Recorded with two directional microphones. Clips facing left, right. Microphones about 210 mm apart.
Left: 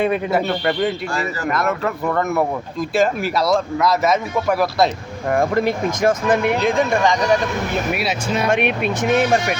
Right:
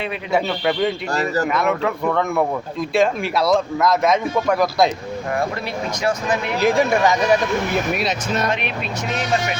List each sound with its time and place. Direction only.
0.3 s speech: centre (ahead or behind)
1.1 s speech: 40° right (ahead or behind)
1.5 s speech: centre (ahead or behind)
5.3 s speech: 50° left (ahead or behind)
6.6 s speech: centre (ahead or behind)
7.9 s speech: 10° left (ahead or behind)
8.4 s speech: 55° left (ahead or behind)